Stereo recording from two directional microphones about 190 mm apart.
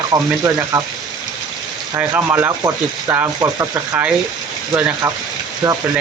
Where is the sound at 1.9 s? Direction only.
10° right (ahead or behind).